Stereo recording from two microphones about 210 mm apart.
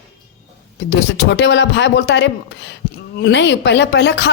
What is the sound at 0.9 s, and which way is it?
Speech, 55° left (ahead or behind).